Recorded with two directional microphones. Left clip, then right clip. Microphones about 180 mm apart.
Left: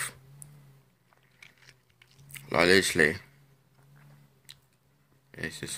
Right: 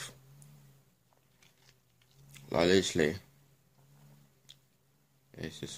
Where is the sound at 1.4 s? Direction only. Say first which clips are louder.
Left 12 dB; 15° right (ahead or behind).